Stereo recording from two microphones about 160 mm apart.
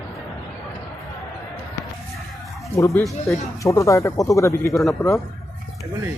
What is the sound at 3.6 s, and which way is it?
Speech, 20° left (ahead or behind).